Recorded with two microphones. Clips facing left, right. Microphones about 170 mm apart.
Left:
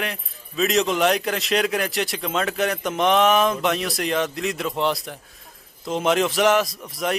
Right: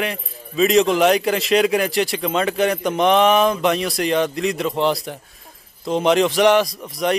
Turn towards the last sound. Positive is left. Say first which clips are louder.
# right 5 dB
turn(degrees=0)  # may be behind; listen again after turning